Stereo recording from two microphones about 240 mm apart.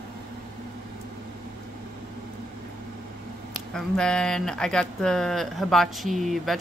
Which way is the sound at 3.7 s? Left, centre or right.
Centre.